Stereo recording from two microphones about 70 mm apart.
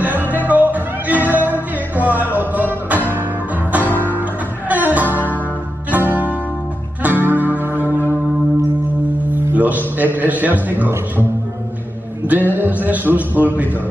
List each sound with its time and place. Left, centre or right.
0.0 s music: right
3.9 s music: left
4.2 s music: right
9.3 s music: right
10.1 s a man's voice: right
12.3 s a man's voice: right